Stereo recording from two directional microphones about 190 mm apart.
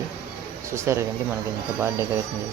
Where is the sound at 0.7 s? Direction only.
15° right (ahead or behind).